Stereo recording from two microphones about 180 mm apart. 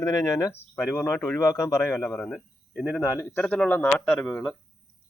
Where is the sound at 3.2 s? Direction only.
10° left (ahead or behind).